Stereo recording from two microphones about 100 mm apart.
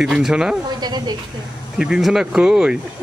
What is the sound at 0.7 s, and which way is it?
Speech, 45° right (ahead or behind).